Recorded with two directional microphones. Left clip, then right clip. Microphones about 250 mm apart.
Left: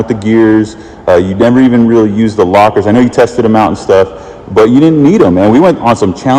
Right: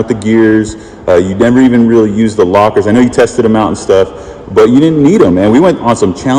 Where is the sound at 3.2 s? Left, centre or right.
Left.